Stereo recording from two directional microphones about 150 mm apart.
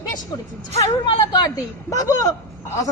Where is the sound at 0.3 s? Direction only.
25° left (ahead or behind).